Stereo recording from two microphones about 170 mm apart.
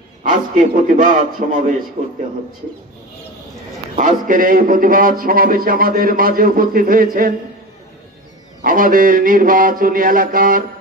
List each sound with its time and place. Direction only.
0.3 s a man's voice: 50° right (ahead or behind)
3.9 s a man's voice: 50° right (ahead or behind)
8.6 s a man's voice: 55° right (ahead or behind)